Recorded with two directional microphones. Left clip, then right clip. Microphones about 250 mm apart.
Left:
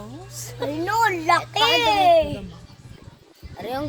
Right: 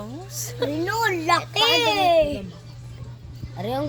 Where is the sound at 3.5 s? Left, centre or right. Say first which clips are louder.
Right 1 dB; left.